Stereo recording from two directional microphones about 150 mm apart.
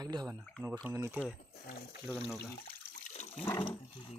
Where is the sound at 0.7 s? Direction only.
10° right (ahead or behind).